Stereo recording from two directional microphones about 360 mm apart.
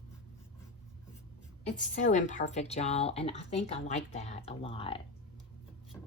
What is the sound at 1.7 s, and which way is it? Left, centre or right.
Speech, left.